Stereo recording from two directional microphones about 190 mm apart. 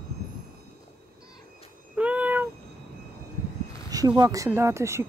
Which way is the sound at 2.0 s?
5° right (ahead or behind).